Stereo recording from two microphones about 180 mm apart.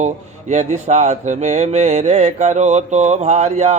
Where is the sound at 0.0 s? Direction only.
40° right (ahead or behind).